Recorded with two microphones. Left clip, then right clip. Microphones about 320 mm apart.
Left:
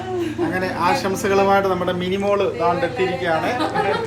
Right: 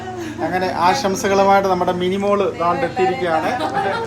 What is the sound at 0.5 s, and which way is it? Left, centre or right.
Speech, centre.